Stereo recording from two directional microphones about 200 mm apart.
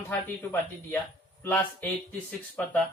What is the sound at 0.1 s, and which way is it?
Speech, 10° left (ahead or behind).